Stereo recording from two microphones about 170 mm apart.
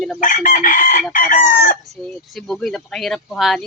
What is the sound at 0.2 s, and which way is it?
Chicken, 50° left (ahead or behind).